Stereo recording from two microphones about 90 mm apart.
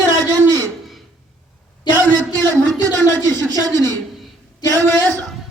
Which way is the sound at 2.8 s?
45° right (ahead or behind).